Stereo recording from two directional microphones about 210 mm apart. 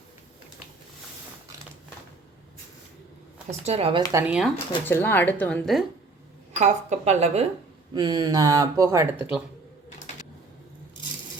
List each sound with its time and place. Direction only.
3.7 s speech: 25° right (ahead or behind)
4.1 s speech: 5° right (ahead or behind)
4.5 s speech: 10° left (ahead or behind)
6.6 s speech: 35° right (ahead or behind)
7.9 s speech: 20° right (ahead or behind)